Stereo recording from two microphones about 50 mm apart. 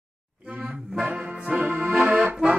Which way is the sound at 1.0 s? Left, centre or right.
Right.